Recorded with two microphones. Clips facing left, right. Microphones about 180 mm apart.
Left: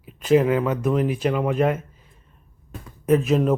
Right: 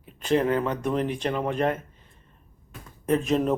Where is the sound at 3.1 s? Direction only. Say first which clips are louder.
Left 4 dB; 5° left (ahead or behind).